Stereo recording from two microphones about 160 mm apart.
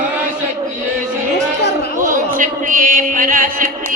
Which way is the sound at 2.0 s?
55° right (ahead or behind).